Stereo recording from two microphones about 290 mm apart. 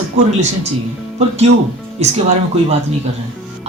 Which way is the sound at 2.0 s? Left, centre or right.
Right.